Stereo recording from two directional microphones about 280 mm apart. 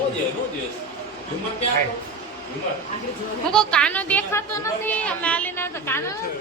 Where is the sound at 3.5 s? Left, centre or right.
Centre.